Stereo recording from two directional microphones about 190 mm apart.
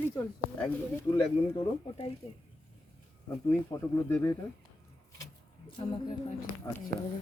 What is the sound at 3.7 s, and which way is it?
Speech, 15° left (ahead or behind).